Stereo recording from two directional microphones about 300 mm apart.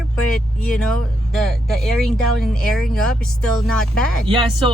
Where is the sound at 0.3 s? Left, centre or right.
Centre.